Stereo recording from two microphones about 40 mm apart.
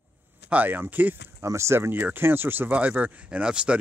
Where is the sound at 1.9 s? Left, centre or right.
Right.